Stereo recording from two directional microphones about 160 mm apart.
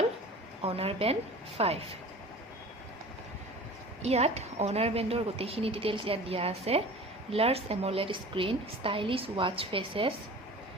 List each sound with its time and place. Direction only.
0.6 s a woman's voice: 35° right (ahead or behind)
4.0 s a woman's voice: 40° right (ahead or behind)